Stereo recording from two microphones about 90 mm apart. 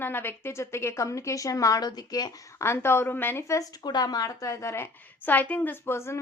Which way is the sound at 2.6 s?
30° left (ahead or behind).